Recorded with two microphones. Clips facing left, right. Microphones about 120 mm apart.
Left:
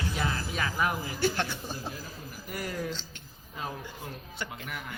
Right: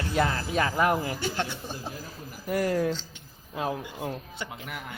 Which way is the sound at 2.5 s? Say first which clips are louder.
Right 10 dB; 45° right (ahead or behind).